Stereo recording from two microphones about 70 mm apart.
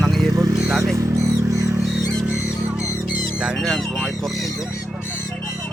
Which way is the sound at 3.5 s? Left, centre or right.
Centre.